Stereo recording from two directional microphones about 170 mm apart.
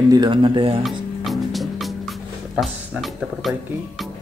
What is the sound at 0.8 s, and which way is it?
Music, centre (ahead or behind).